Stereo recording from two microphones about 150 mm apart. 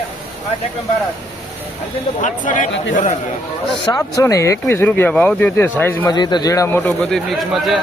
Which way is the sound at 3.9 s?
20° left (ahead or behind).